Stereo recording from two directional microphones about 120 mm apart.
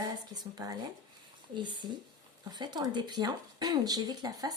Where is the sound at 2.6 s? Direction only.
35° right (ahead or behind).